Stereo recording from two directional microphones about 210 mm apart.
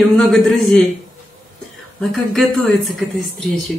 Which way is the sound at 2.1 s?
Centre (ahead or behind).